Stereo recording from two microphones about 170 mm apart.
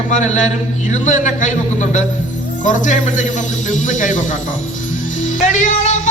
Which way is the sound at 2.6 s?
50° left (ahead or behind).